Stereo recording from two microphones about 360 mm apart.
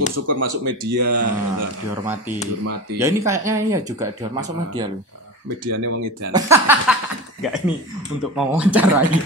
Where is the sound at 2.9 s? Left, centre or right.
Centre.